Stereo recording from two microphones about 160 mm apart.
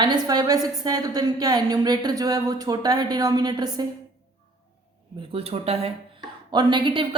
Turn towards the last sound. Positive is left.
turn(degrees=-30)  # may be behind; listen again after turning